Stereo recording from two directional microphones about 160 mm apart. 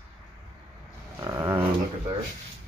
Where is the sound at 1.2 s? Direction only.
15° right (ahead or behind).